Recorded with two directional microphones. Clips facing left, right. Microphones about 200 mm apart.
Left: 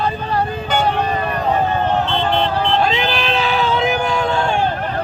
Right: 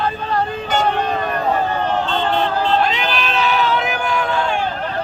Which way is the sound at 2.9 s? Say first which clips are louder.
Left 2 dB; 30° left (ahead or behind).